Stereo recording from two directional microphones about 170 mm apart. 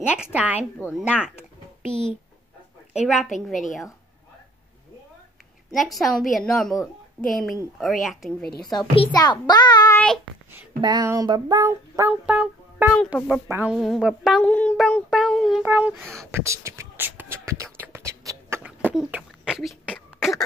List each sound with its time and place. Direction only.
0.2 s speech: 10° right (ahead or behind)
2.9 s a woman's voice: 5° right (ahead or behind)
5.7 s a woman's voice: centre (ahead or behind)
8.9 s a child's voice: 30° left (ahead or behind)
9.9 s child singing: 5° left (ahead or behind)
10.8 s female singing: 25° right (ahead or behind)
12.1 s music: 5° right (ahead or behind)
12.9 s a woman's voice: centre (ahead or behind)
13.5 s speech: 10° right (ahead or behind)
13.7 s a woman's voice: centre (ahead or behind)
15.6 s speech: 10° right (ahead or behind)
17.7 s a sound: 15° right (ahead or behind)
18.9 s beatboxing: 5° right (ahead or behind)
20.2 s cough: centre (ahead or behind)